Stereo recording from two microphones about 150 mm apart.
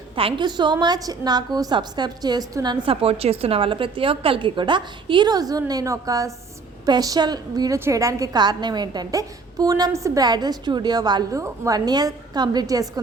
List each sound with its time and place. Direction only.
0.2 s a woman's voice: 35° right (ahead or behind)